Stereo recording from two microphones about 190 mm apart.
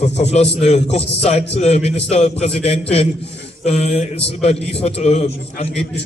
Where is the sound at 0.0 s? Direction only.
35° left (ahead or behind).